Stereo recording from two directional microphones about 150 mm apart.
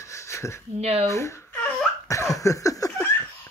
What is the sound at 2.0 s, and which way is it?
Laughter, 20° left (ahead or behind).